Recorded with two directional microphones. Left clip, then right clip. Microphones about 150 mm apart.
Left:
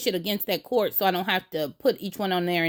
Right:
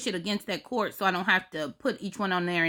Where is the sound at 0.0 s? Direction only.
20° left (ahead or behind).